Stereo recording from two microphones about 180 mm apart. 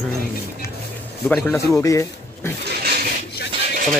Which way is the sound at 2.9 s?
60° right (ahead or behind).